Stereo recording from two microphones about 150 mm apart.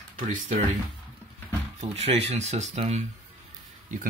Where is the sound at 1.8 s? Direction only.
45° right (ahead or behind).